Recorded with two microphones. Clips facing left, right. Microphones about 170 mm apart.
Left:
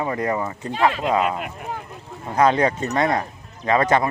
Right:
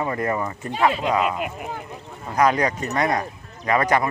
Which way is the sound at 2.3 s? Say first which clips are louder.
Left 2 dB; 25° left (ahead or behind).